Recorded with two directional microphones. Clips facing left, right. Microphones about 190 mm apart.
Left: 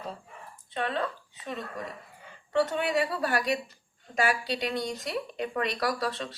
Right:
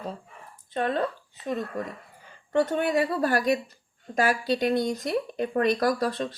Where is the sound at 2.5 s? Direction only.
50° right (ahead or behind).